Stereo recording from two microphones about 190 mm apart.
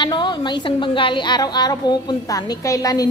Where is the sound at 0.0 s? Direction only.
25° left (ahead or behind).